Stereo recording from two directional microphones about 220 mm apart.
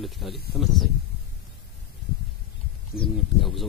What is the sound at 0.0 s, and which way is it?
Speech, centre (ahead or behind).